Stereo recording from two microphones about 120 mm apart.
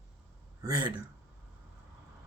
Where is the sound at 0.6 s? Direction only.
30° right (ahead or behind).